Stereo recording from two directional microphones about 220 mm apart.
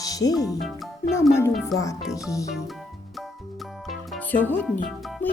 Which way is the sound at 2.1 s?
15° left (ahead or behind).